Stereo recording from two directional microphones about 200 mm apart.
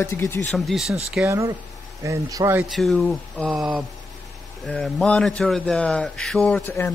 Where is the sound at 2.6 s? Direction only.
Centre (ahead or behind).